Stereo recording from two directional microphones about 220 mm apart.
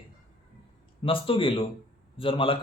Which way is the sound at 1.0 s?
25° left (ahead or behind).